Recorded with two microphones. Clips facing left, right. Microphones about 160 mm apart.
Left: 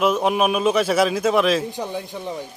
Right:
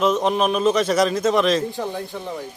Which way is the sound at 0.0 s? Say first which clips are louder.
Even; 10° left (ahead or behind).